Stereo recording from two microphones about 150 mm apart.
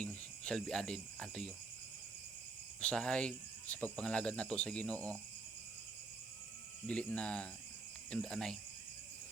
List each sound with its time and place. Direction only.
0.0 s cricket: 5° left (ahead or behind)
2.8 s speech: 5° left (ahead or behind)
6.8 s speech: 10° left (ahead or behind)